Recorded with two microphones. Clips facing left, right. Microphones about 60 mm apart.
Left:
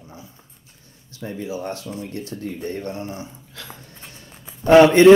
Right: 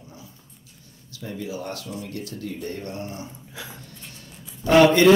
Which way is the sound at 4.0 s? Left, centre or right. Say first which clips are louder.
Left 1 dB; left.